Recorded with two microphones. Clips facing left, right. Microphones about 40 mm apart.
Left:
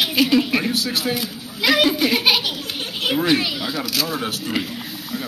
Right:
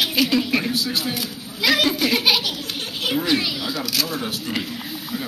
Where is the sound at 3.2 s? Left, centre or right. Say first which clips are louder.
Left 2 dB; centre.